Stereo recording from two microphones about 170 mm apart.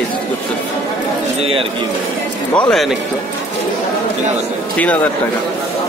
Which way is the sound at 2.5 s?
5° left (ahead or behind).